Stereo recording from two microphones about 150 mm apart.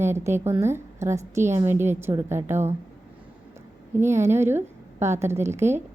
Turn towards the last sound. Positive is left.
turn(degrees=-15)  # may be behind; listen again after turning